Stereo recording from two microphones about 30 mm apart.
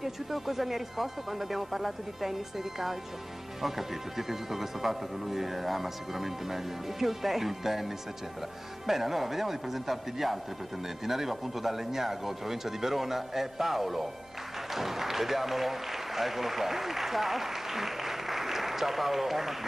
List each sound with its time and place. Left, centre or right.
0.0 s speech: centre